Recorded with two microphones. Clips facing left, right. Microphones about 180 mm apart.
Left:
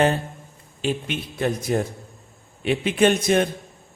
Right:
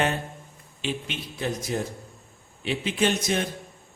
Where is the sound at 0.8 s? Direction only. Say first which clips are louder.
Left 6 dB; 50° left (ahead or behind).